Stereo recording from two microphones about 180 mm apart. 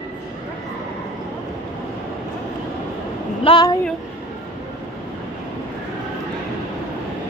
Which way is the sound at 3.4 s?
25° left (ahead or behind).